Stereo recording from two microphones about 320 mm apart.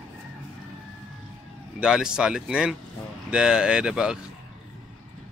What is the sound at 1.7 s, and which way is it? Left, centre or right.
Speech, centre.